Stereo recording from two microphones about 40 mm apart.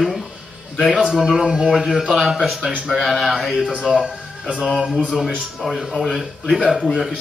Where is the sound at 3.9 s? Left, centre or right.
Right.